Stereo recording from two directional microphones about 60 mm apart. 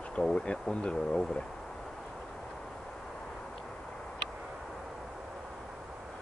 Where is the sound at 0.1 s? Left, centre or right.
Centre.